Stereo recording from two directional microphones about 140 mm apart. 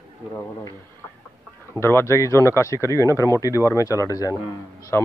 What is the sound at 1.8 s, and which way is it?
Speech, 15° left (ahead or behind).